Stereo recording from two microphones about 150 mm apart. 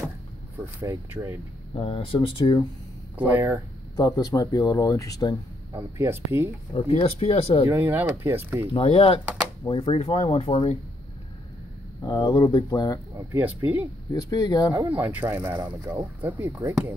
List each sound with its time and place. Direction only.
0.7 s speech: 15° right (ahead or behind)
1.8 s speech: 35° left (ahead or behind)
3.2 s speech: 10° right (ahead or behind)
3.9 s speech: 25° left (ahead or behind)
5.7 s speech: 20° right (ahead or behind)
6.7 s speech: 40° left (ahead or behind)
7.6 s speech: 15° right (ahead or behind)
8.7 s speech: 40° left (ahead or behind)
12.0 s speech: 30° left (ahead or behind)
13.3 s speech: 15° right (ahead or behind)
14.1 s speech: 25° left (ahead or behind)
14.7 s speech: 15° right (ahead or behind)